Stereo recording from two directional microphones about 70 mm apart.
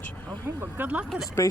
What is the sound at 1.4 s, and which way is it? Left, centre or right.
Speech, left.